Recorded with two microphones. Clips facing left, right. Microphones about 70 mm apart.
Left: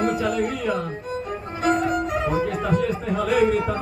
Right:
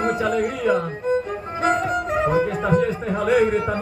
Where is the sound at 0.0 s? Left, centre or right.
Right.